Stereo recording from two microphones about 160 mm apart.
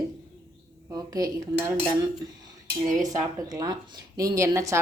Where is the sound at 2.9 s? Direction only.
20° right (ahead or behind).